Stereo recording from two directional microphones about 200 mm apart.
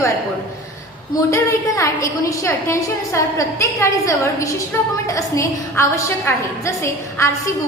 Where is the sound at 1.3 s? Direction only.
15° left (ahead or behind).